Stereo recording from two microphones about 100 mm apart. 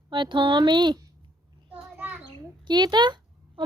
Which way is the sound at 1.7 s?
15° right (ahead or behind).